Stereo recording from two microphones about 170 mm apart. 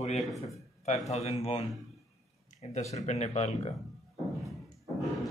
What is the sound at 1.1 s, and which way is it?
Speech, 40° left (ahead or behind).